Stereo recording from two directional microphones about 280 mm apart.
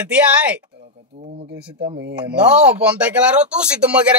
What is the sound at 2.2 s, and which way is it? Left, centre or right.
Speech, centre.